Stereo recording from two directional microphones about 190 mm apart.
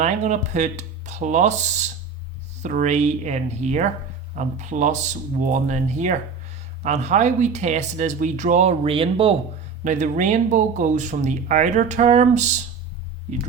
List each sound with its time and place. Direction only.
0.0 s speech: 40° right (ahead or behind)
9.8 s speech: 40° right (ahead or behind)